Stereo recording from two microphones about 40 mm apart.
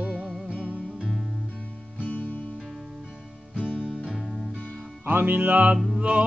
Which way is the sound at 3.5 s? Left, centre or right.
Left.